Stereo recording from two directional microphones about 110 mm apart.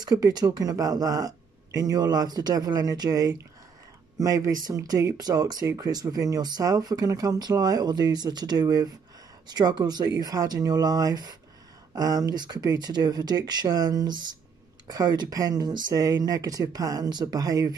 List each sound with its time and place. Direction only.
0.0 s speech: 35° right (ahead or behind)